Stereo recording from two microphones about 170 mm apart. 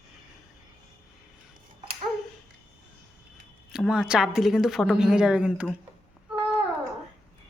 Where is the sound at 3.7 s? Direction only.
5° right (ahead or behind).